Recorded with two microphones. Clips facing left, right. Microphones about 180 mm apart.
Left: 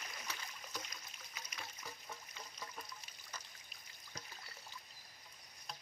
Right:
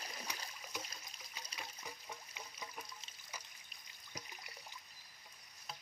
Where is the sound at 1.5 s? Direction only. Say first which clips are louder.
Right 1 dB; 15° right (ahead or behind).